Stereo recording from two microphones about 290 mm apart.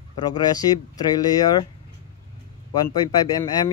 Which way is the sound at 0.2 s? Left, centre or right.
Centre.